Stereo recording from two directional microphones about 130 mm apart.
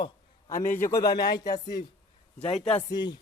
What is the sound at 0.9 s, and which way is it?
Speech, 25° left (ahead or behind).